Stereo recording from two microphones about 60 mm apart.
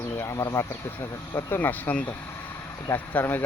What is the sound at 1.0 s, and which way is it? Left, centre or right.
Speech, left.